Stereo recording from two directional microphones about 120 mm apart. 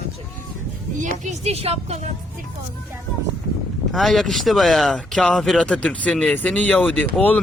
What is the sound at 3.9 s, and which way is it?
A man's voice, centre (ahead or behind).